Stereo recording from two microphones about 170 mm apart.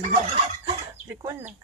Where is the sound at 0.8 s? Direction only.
15° right (ahead or behind).